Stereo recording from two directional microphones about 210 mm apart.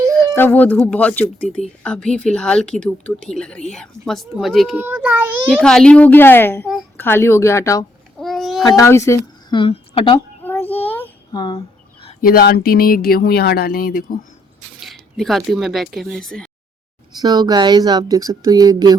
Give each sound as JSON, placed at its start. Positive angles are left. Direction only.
{"t": 0.1, "sound": "a woman's voice", "side_deg": 10}
{"t": 5.5, "sound": "a woman's voice", "side_deg": 5}
{"t": 8.2, "sound": "a child's voice", "side_deg": 0}
{"t": 8.6, "sound": "a woman's voice", "side_deg": 15}
{"t": 10.4, "sound": "child singing", "side_deg": 10}
{"t": 11.3, "sound": "speech", "side_deg": 20}
{"t": 12.2, "sound": "speech", "side_deg": 45}
{"t": 14.8, "sound": "speech", "side_deg": 0}
{"t": 17.2, "sound": "speech", "side_deg": -20}